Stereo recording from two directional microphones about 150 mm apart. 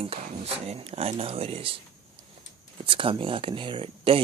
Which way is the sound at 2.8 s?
35° right (ahead or behind).